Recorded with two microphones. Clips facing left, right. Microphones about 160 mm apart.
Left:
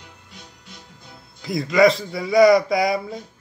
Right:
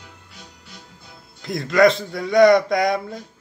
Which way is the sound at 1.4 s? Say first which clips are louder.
Even; centre (ahead or behind).